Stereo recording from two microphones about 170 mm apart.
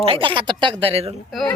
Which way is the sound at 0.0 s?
30° right (ahead or behind).